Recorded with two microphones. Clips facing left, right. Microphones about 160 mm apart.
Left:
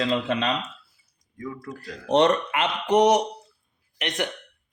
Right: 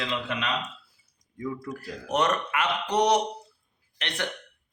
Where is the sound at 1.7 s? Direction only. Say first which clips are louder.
Left 11 dB; 30° left (ahead or behind).